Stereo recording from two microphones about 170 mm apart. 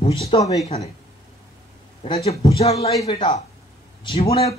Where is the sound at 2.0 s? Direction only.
35° left (ahead or behind).